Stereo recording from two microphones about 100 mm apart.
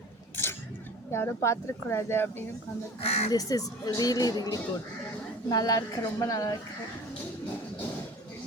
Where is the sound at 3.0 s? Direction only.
90° left.